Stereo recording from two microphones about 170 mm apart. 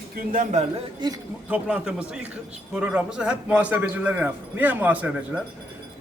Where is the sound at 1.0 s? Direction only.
25° right (ahead or behind).